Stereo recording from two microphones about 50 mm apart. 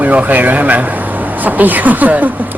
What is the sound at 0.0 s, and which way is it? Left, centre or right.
Speech, right.